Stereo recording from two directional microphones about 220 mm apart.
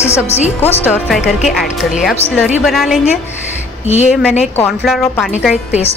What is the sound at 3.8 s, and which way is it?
Speech, 30° left (ahead or behind).